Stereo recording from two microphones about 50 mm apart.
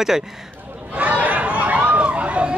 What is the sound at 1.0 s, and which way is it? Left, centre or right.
Chatter, right.